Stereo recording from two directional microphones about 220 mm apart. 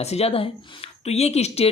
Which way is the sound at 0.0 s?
30° left (ahead or behind).